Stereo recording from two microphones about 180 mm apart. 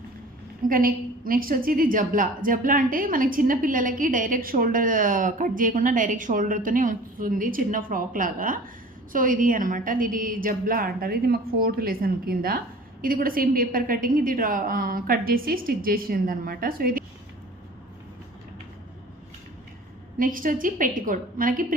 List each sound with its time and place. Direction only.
0.7 s a woman's voice: 50° right (ahead or behind)
20.1 s a woman's voice: 50° right (ahead or behind)